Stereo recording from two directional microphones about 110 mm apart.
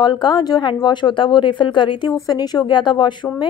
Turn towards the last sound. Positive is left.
turn(degrees=45)  # may be behind; listen again after turning